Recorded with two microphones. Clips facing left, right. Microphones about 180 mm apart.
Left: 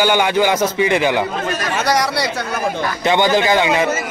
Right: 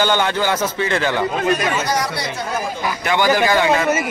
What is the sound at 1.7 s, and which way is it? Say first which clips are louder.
Speech: left 3 dB; 70° left (ahead or behind).